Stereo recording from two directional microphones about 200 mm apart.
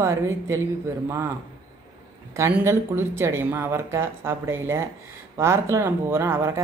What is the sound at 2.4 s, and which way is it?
Speech, 10° right (ahead or behind).